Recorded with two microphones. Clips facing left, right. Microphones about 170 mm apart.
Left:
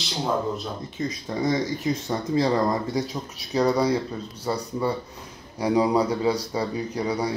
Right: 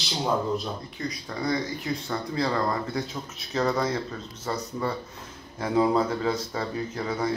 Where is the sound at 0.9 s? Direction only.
20° left (ahead or behind).